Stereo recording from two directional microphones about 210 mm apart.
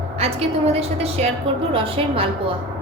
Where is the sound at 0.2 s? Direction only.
30° right (ahead or behind).